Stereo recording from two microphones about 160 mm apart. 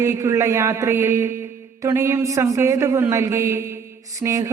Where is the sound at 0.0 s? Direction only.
20° right (ahead or behind).